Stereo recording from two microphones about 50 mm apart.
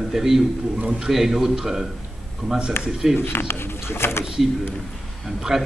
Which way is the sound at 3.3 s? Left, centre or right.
Left.